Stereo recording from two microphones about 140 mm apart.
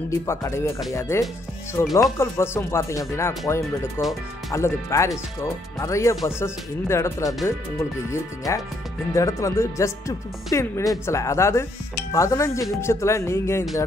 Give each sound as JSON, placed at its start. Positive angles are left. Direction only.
{"t": 0.3, "sound": "speech", "side_deg": 20}
{"t": 8.5, "sound": "speech", "side_deg": 20}